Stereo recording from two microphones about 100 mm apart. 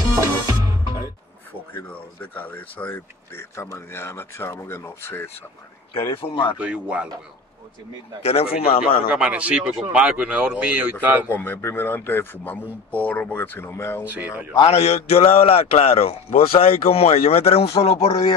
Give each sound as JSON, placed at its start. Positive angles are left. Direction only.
{"t": 1.9, "sound": "speech", "side_deg": 20}
{"t": 5.9, "sound": "speech", "side_deg": 65}
{"t": 6.6, "sound": "speech", "side_deg": -10}
{"t": 8.2, "sound": "speech", "side_deg": 90}
{"t": 8.8, "sound": "speech", "side_deg": -10}
{"t": 11.2, "sound": "speech", "side_deg": 20}
{"t": 14.0, "sound": "speech", "side_deg": -15}
{"t": 14.6, "sound": "a man's voice", "side_deg": 90}
{"t": 18.0, "sound": "speech", "side_deg": 55}